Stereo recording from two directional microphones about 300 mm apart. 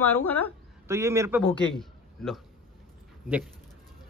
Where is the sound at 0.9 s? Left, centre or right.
Centre.